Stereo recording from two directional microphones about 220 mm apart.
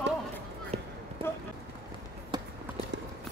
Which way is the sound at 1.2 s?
25° right (ahead or behind).